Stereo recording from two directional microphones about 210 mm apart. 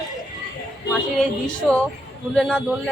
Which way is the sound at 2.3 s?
5° left (ahead or behind).